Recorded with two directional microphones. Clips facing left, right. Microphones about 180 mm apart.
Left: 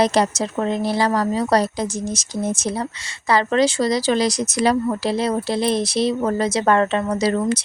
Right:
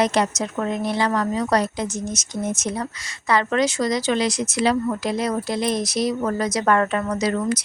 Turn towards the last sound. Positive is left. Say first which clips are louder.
# left 3 dB
turn(degrees=25)  # may be behind; listen again after turning